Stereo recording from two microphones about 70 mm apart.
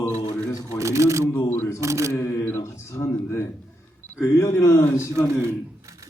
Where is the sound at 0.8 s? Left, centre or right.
Right.